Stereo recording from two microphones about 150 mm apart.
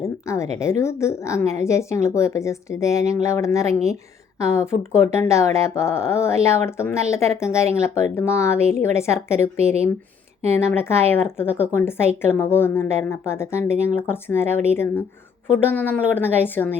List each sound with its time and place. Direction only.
0.0 s a sound: 20° left (ahead or behind)
0.6 s a woman's voice: 20° left (ahead or behind)
10.7 s speech: 15° left (ahead or behind)